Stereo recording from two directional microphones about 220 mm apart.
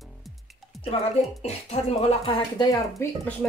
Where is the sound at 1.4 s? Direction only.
30° left (ahead or behind).